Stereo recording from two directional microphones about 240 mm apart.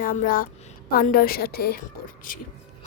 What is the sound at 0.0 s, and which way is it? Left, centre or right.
A woman's voice, left.